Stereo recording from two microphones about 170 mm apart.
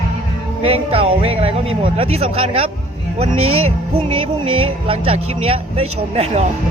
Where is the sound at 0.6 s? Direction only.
35° right (ahead or behind).